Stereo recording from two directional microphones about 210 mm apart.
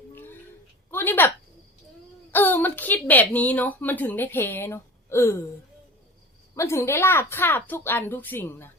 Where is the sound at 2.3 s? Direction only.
10° left (ahead or behind).